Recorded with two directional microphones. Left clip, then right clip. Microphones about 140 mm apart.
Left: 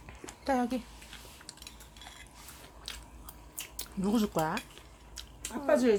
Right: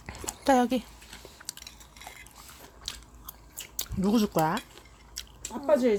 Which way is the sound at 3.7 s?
35° right (ahead or behind).